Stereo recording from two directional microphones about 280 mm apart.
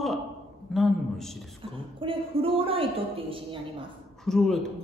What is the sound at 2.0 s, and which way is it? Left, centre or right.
A woman's voice, centre.